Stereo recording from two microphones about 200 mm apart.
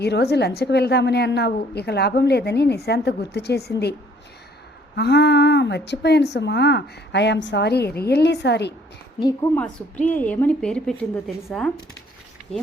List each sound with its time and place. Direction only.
0.0 s a woman's voice: 55° left (ahead or behind)
4.9 s a woman's voice: 55° left (ahead or behind)
9.2 s a woman's voice: 10° left (ahead or behind)